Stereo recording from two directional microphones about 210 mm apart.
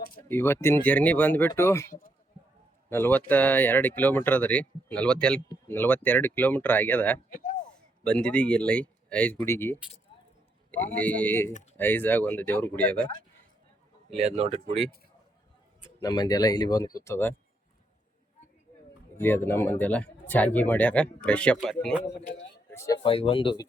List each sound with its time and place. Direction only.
0.3 s speech: 10° left (ahead or behind)
1.9 s a man's voice: 40° left (ahead or behind)
2.9 s speech: 10° left (ahead or behind)
7.3 s a sound: 40° left (ahead or behind)
7.7 s speech: 5° left (ahead or behind)
14.1 s a man's voice: 30° right (ahead or behind)
16.0 s speech: 20° left (ahead or behind)
19.1 s speech: 10° left (ahead or behind)
22.7 s speech: 15° left (ahead or behind)
23.0 s speech: 25° left (ahead or behind)